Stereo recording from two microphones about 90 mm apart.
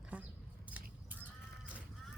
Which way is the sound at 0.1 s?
15° right (ahead or behind).